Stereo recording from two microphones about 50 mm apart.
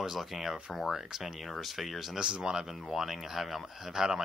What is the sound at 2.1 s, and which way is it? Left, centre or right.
Speech, centre.